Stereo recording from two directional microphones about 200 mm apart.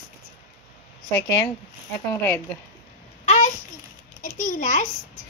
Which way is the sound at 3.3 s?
35° left (ahead or behind).